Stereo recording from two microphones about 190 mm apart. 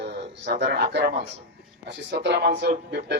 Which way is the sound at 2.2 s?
60° right (ahead or behind).